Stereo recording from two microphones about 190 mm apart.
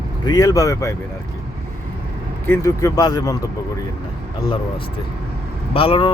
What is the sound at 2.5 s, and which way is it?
Speech, 15° left (ahead or behind).